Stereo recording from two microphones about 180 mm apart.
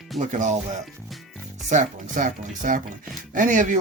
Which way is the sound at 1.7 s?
45° right (ahead or behind).